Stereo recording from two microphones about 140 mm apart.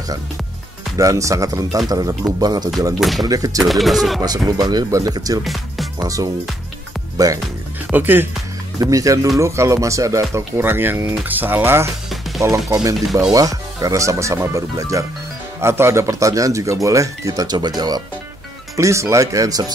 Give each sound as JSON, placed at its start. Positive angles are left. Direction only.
{"t": 0.9, "sound": "speech", "side_deg": -20}
{"t": 2.9, "sound": "speech", "side_deg": 0}
{"t": 3.3, "sound": "speech", "side_deg": -25}
{"t": 3.5, "sound": "speech", "side_deg": 0}
{"t": 4.5, "sound": "speech", "side_deg": -25}
{"t": 5.4, "sound": "music", "side_deg": 0}
{"t": 5.9, "sound": "speech", "side_deg": -25}
{"t": 7.9, "sound": "speech", "side_deg": -15}
{"t": 12.1, "sound": "music", "side_deg": 0}
{"t": 12.6, "sound": "speech", "side_deg": -25}